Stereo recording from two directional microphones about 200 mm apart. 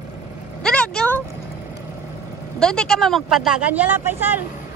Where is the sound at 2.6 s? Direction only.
5° left (ahead or behind).